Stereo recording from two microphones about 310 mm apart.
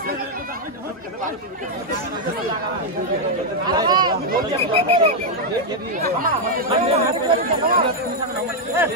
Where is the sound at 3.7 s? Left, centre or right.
Centre.